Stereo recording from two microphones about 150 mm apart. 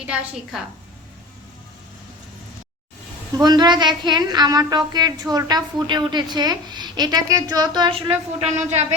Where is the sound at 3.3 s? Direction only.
25° right (ahead or behind).